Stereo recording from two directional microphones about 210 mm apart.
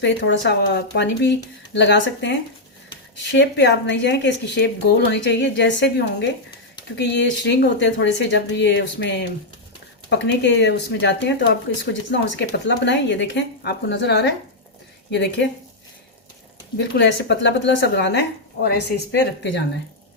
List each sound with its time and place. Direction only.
0.0 s speech: 55° left (ahead or behind)
16.7 s speech: 55° left (ahead or behind)